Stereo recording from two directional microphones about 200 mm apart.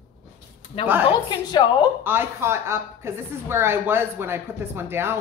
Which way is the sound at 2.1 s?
10° right (ahead or behind).